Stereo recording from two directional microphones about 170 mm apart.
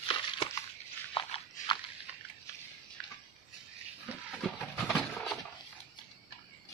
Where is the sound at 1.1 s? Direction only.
30° left (ahead or behind).